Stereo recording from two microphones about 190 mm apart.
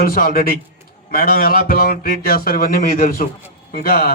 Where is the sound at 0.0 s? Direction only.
50° left (ahead or behind).